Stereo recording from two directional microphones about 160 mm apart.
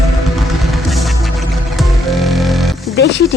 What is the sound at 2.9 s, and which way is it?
Speech, 90° left.